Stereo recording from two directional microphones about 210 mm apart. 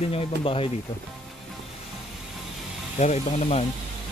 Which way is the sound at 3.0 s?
35° left (ahead or behind).